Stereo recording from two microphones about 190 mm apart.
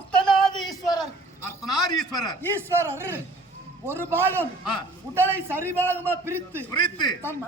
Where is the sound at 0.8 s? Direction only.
20° left (ahead or behind).